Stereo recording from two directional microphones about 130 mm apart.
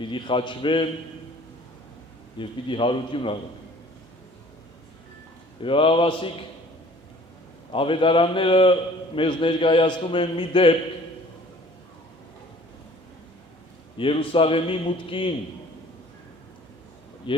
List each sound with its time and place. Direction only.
0.0 s a man's voice: 40° left (ahead or behind)
2.4 s a man's voice: 40° left (ahead or behind)
5.6 s a man's voice: 45° left (ahead or behind)
7.7 s a man's voice: 45° left (ahead or behind)
13.9 s a man's voice: 40° left (ahead or behind)
17.3 s speech: 40° left (ahead or behind)